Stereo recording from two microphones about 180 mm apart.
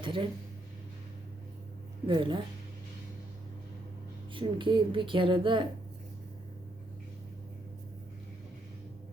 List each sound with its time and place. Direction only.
0.0 s speech: 30° right (ahead or behind)
2.0 s speech: 25° right (ahead or behind)
4.4 s speech: 25° right (ahead or behind)